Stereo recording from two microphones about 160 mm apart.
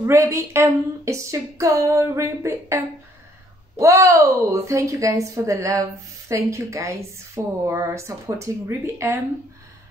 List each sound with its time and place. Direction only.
0.0 s a woman's voice: 20° right (ahead or behind)